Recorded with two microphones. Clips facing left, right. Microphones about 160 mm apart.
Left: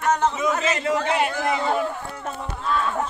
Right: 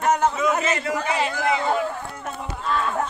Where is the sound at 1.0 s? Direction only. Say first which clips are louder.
Left 2 dB; 60° left (ahead or behind).